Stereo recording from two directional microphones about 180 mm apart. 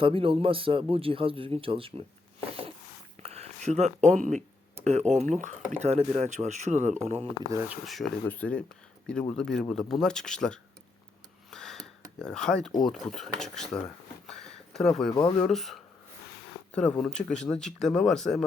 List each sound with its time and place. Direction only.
0.0 s speech: 30° right (ahead or behind)
3.2 s speech: 35° right (ahead or behind)
7.7 s speech: centre (ahead or behind)
11.5 s a sound: centre (ahead or behind)
12.8 s speech: centre (ahead or behind)
14.3 s a sound: 5° left (ahead or behind)
15.1 s speech: 25° left (ahead or behind)
15.4 s speech: centre (ahead or behind)